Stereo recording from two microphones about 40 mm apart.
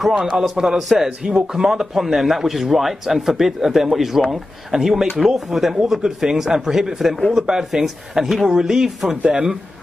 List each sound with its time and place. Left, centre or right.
0.1 s a man's voice: centre
9.2 s speech: right